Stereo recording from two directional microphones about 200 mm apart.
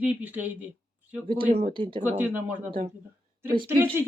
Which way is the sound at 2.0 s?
10° right (ahead or behind).